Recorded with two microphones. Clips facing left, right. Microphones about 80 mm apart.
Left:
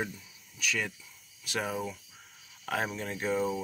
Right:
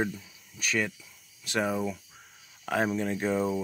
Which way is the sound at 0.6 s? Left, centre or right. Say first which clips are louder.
Right 4 dB; right.